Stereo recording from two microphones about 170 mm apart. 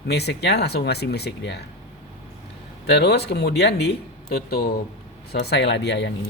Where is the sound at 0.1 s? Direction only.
75° left (ahead or behind).